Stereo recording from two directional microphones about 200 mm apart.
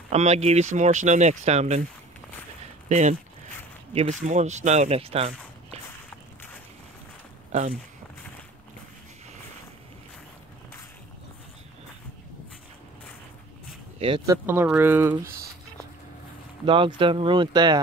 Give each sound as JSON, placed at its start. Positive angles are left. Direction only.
{"t": 0.1, "sound": "speech", "side_deg": -35}
{"t": 2.9, "sound": "speech", "side_deg": -35}
{"t": 13.9, "sound": "speech", "side_deg": -25}
{"t": 14.3, "sound": "speech", "side_deg": -10}
{"t": 16.6, "sound": "speech", "side_deg": -25}